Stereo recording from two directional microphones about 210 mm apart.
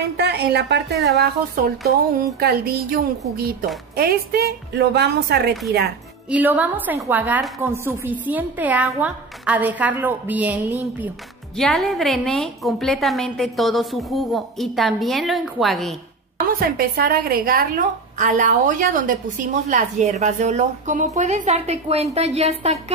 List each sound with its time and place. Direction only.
0.2 s a woman's voice: 50° right (ahead or behind)
6.3 s a woman's voice: 5° right (ahead or behind)
16.5 s a woman's voice: 45° right (ahead or behind)